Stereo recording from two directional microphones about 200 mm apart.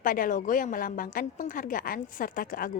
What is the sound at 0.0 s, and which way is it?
A woman's voice, 45° left (ahead or behind).